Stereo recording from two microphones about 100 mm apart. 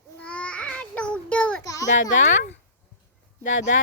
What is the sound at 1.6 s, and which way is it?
Child singing, 35° left (ahead or behind).